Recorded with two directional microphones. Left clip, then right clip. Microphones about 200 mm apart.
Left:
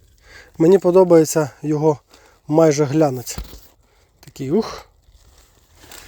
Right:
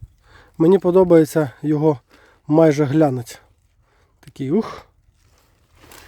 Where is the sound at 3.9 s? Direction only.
25° right (ahead or behind).